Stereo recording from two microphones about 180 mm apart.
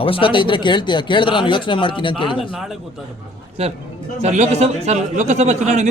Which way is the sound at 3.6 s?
35° right (ahead or behind).